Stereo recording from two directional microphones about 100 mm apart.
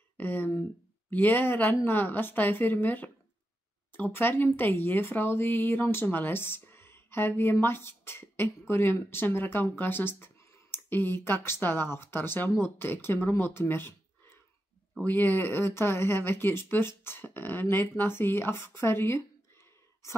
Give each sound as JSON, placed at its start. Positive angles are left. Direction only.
{"t": 0.2, "sound": "speech", "side_deg": 20}
{"t": 15.0, "sound": "speech", "side_deg": 15}